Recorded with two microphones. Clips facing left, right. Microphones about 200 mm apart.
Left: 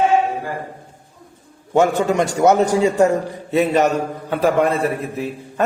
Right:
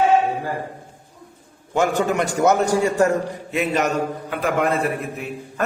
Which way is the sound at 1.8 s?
25° left (ahead or behind).